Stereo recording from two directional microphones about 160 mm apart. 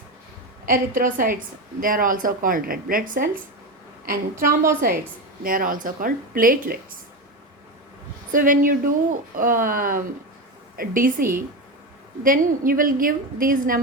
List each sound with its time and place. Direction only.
0.6 s a woman's voice: 60° right (ahead or behind)
8.3 s a woman's voice: 60° right (ahead or behind)